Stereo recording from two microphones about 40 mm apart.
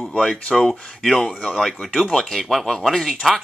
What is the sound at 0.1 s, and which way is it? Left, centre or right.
Speech, left.